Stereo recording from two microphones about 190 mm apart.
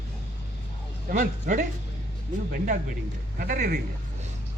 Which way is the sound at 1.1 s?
45° right (ahead or behind).